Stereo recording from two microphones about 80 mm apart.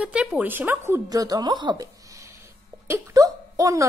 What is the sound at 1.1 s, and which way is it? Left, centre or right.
Speech, right.